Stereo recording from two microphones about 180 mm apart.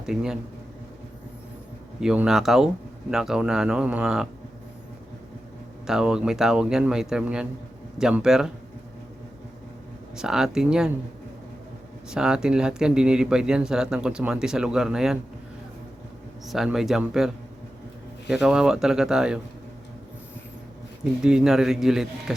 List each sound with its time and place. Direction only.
0.0 s speech: 5° right (ahead or behind)
2.0 s speech: 5° right (ahead or behind)
5.8 s speech: 5° right (ahead or behind)
10.2 s speech: 5° right (ahead or behind)
12.1 s speech: 5° right (ahead or behind)
16.5 s speech: centre (ahead or behind)
21.0 s speech: 5° right (ahead or behind)